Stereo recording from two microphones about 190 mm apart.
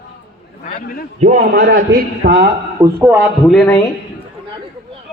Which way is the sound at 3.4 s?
5° left (ahead or behind).